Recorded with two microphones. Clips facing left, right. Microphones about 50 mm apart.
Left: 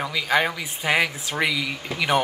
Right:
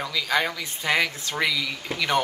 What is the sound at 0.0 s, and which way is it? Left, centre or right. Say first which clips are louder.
Speech: left 3 dB; centre.